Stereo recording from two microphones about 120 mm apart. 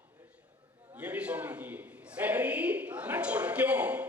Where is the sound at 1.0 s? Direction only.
10° right (ahead or behind).